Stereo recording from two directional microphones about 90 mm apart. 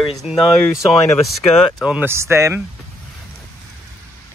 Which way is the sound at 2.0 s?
30° right (ahead or behind).